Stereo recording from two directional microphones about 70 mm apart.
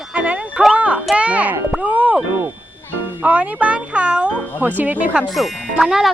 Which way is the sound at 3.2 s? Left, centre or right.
Right.